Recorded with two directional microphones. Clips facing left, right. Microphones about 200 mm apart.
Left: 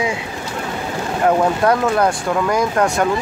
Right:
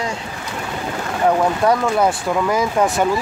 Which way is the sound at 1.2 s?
5° left (ahead or behind).